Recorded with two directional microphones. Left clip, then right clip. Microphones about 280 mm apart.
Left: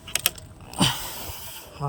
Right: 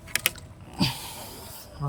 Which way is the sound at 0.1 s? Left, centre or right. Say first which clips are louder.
Left 1 dB; centre.